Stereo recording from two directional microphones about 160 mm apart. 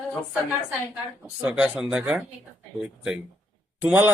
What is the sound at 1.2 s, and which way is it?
A man's voice, 10° right (ahead or behind).